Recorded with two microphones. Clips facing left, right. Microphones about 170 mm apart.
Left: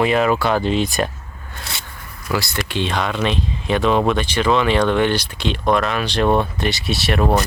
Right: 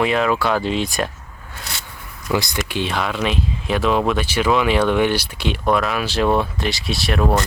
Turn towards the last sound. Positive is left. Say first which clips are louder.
# left 1 dB
turn(degrees=10)  # may be behind; listen again after turning